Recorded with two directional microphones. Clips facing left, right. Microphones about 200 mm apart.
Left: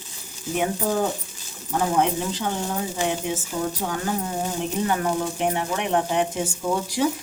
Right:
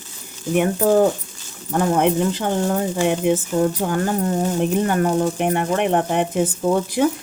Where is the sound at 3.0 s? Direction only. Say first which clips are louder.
Right 8 dB; 60° right (ahead or behind).